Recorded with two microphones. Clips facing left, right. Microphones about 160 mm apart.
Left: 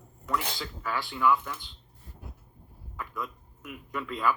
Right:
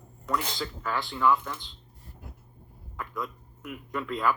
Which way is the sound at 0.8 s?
10° left (ahead or behind).